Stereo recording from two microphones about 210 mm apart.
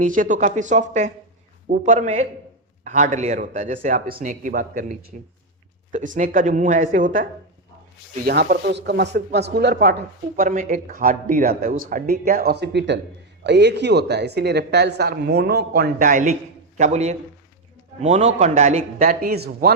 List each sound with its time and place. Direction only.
0.0 s a man's voice: 40° right (ahead or behind)